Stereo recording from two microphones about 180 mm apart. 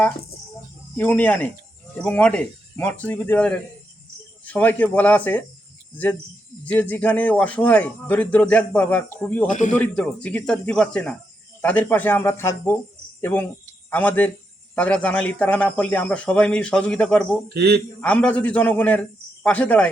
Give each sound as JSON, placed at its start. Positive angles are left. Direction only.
{"t": 0.9, "sound": "speech", "side_deg": 10}
{"t": 6.7, "sound": "speech", "side_deg": 10}
{"t": 9.5, "sound": "a man's voice", "side_deg": 45}
{"t": 9.7, "sound": "speech", "side_deg": 5}
{"t": 17.5, "sound": "a man's voice", "side_deg": -65}
{"t": 18.0, "sound": "speech", "side_deg": 5}